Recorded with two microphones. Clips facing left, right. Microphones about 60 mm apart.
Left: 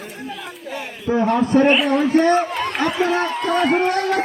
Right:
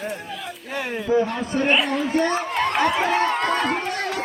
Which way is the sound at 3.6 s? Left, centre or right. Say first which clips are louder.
Left 7 dB; left.